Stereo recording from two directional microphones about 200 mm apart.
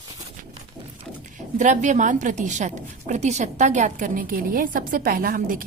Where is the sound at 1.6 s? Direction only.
40° right (ahead or behind).